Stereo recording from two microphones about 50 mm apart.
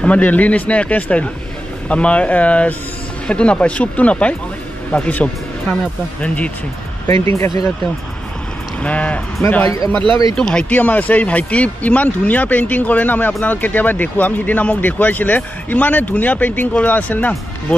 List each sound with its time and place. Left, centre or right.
0.0 s speech: left
7.1 s speech: left
8.8 s speech: left